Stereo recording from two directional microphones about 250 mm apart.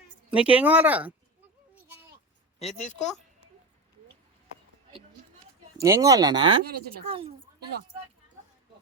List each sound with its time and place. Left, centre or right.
0.3 s speech: centre
1.7 s a sound: centre
2.7 s a woman's voice: left
5.7 s speech: centre